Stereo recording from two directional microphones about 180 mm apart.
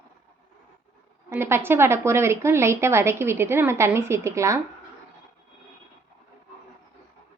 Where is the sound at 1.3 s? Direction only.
15° right (ahead or behind).